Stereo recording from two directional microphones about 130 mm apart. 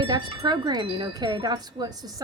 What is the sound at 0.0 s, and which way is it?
Wind chime, 35° right (ahead or behind).